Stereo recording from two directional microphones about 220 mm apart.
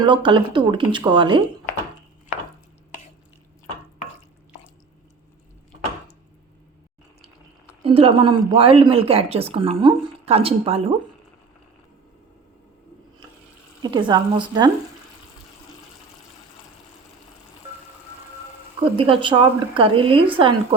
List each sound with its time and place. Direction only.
0.0 s speech: 20° right (ahead or behind)
7.9 s speech: 25° right (ahead or behind)
13.8 s speech: 20° right (ahead or behind)
18.9 s speech: 25° right (ahead or behind)